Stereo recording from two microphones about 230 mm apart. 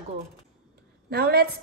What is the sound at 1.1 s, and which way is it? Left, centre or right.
Speech, right.